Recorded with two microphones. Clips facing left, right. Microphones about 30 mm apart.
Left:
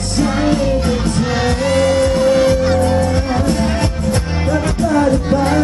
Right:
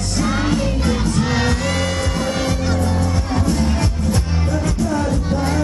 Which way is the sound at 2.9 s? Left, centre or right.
Left.